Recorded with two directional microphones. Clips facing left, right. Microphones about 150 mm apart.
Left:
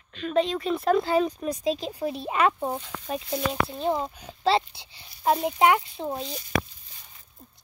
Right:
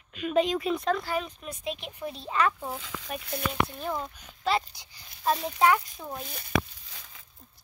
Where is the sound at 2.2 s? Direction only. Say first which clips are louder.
Left 3 dB; 20° left (ahead or behind).